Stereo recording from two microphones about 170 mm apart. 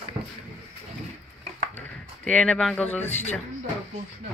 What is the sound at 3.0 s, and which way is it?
Speech, 40° left (ahead or behind).